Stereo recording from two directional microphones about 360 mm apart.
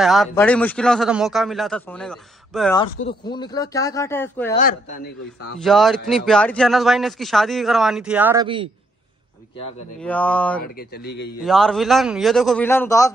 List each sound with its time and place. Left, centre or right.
0.0 s a man's voice: centre
4.6 s a man's voice: left
5.6 s a man's voice: centre
9.9 s a man's voice: centre
10.6 s a man's voice: left
11.4 s a man's voice: centre